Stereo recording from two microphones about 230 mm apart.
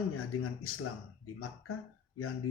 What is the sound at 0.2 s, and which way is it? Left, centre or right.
Speech, left.